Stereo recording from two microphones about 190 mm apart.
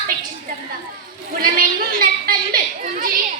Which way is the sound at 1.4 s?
50° right (ahead or behind).